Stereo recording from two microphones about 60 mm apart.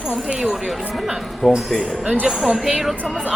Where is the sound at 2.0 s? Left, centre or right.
Centre.